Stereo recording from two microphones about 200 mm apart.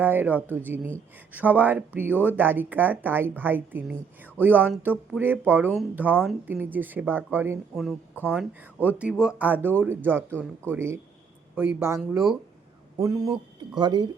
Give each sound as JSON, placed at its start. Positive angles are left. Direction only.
{"t": 0.0, "sound": "speech", "side_deg": -10}
{"t": 13.0, "sound": "speech", "side_deg": -15}